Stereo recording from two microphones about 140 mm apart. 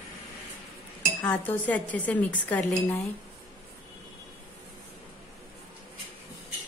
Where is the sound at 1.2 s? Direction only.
10° left (ahead or behind).